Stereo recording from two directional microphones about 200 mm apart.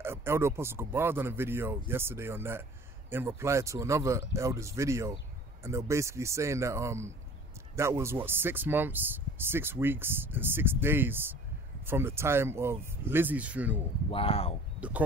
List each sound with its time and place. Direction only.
0.0 s speech: 10° right (ahead or behind)
14.1 s speech: 30° left (ahead or behind)
14.8 s speech: 5° right (ahead or behind)